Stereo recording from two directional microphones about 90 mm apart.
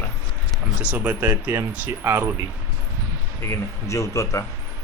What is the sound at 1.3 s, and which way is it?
Speech, 30° right (ahead or behind).